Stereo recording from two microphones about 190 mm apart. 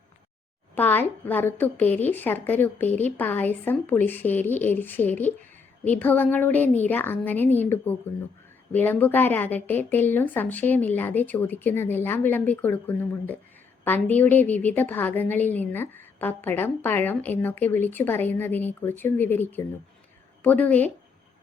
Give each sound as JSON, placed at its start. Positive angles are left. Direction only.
{"t": 0.8, "sound": "a woman's voice", "side_deg": 10}